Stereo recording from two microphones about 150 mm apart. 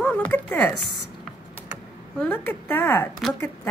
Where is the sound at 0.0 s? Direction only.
10° left (ahead or behind).